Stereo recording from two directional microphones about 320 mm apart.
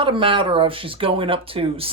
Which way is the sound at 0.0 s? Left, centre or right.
Centre.